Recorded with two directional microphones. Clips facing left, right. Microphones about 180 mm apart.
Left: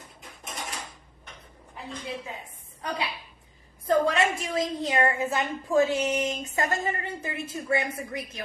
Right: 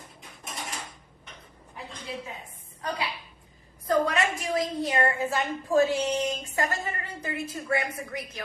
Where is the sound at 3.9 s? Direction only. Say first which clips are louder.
Left 2 dB; 25° left (ahead or behind).